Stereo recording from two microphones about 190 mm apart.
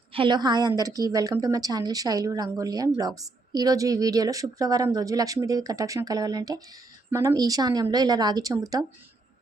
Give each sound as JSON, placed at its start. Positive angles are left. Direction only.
{"t": 0.1, "sound": "a woman's voice", "side_deg": -25}